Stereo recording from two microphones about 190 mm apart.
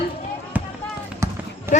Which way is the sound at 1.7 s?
40° left (ahead or behind).